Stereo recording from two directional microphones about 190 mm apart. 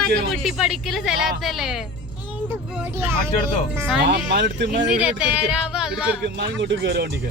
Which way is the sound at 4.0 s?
60° right (ahead or behind).